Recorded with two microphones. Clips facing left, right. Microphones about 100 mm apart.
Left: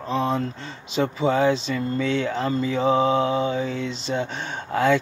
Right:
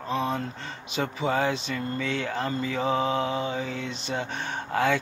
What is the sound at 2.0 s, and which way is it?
Mantra, 25° left (ahead or behind).